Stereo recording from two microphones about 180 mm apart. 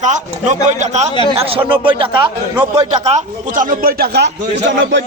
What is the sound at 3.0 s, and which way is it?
A man's voice, 40° right (ahead or behind).